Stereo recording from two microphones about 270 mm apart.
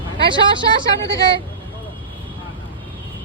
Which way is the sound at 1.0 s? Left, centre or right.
Centre.